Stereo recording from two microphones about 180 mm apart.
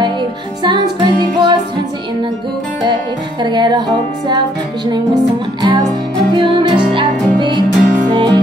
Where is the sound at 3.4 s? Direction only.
25° right (ahead or behind).